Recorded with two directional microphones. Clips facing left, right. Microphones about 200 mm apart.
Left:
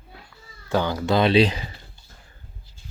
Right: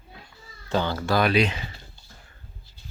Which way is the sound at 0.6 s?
15° left (ahead or behind).